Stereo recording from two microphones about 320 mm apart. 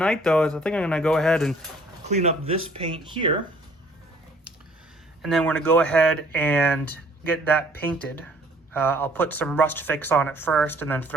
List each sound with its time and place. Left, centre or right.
0.0 s speech: centre
2.0 s speech: centre
5.2 s speech: centre